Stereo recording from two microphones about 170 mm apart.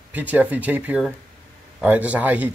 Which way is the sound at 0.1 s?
10° right (ahead or behind).